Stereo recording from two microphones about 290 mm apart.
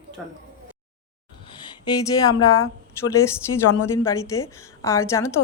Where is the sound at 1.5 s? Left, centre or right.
Centre.